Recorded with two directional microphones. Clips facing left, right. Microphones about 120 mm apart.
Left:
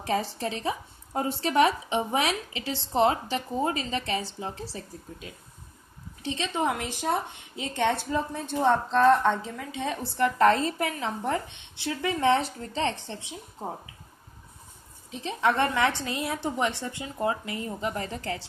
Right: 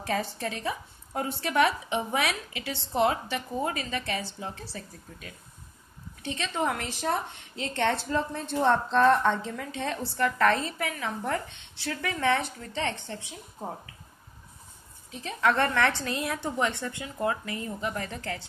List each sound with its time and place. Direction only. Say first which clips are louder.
0.0 s a woman's voice: left 2 dB; 30° left (ahead or behind)
11.3 s speech: left 1 dB; 20° left (ahead or behind)
15.2 s speech: left 1 dB; 15° left (ahead or behind)